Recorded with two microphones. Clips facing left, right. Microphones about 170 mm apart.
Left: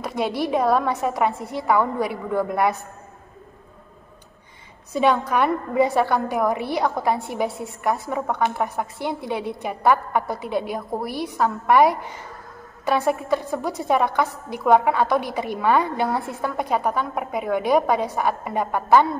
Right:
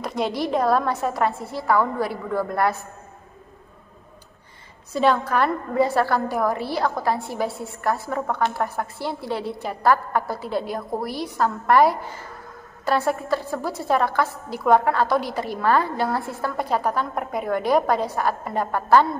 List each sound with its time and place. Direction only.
0.0 s a sound: 5° left (ahead or behind)
0.4 s a woman's voice: 10° left (ahead or behind)
4.9 s a woman's voice: 10° left (ahead or behind)